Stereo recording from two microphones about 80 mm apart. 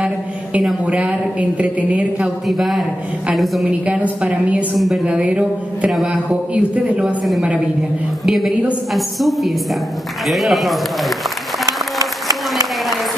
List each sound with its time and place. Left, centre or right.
0.0 s a sound: centre
0.8 s a woman's voice: centre
2.4 s a man's voice: centre
3.8 s a woman's voice: centre
4.7 s a man's voice: centre
5.0 s a woman's voice: centre
5.9 s a man's voice: centre
6.5 s a woman's voice: centre
8.3 s a man's voice: centre
11.6 s applause: right